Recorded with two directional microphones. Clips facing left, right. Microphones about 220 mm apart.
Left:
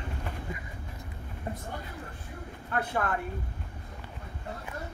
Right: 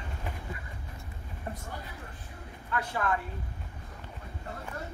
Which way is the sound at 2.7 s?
55° left (ahead or behind).